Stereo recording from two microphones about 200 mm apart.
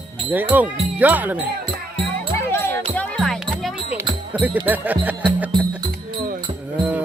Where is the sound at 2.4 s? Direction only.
10° left (ahead or behind).